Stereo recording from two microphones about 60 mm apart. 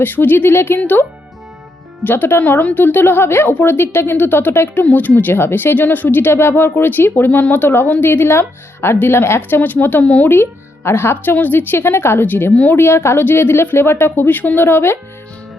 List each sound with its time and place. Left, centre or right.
0.0 s a woman's voice: left
2.0 s a woman's voice: left
9.6 s speech: left
10.2 s a woman's voice: left